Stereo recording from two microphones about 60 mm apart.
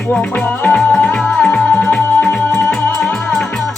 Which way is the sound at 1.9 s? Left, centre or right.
Left.